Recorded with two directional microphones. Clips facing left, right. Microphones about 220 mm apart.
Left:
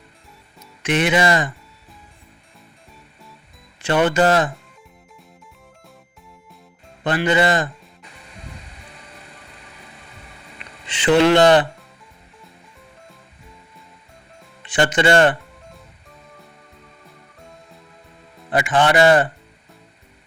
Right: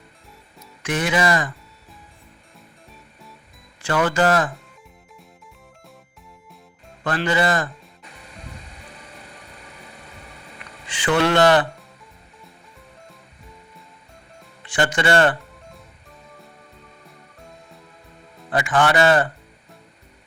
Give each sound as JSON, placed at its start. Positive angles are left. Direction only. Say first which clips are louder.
{"t": 0.8, "sound": "speech", "louder": "left 3 dB", "side_deg": 20}
{"t": 3.8, "sound": "speech", "louder": "left 3 dB", "side_deg": 20}
{"t": 7.0, "sound": "speech", "louder": "left 3 dB", "side_deg": 20}
{"t": 10.6, "sound": "music", "louder": "left 2 dB", "side_deg": 20}
{"t": 14.6, "sound": "speech", "louder": "left 4 dB", "side_deg": 20}
{"t": 18.5, "sound": "speech", "louder": "left 2 dB", "side_deg": 20}